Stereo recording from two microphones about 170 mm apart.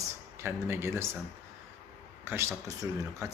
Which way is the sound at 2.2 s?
15° right (ahead or behind).